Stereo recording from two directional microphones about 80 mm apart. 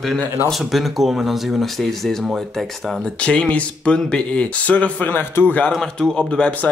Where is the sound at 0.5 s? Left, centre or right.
Centre.